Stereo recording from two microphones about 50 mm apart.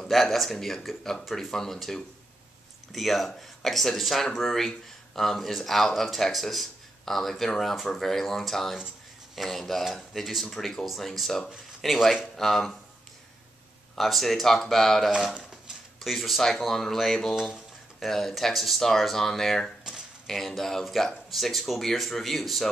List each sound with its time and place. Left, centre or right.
0.0 s speech: centre
13.9 s speech: centre
15.0 s speech: centre